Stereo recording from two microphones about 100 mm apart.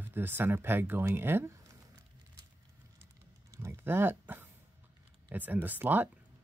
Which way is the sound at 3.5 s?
30° right (ahead or behind).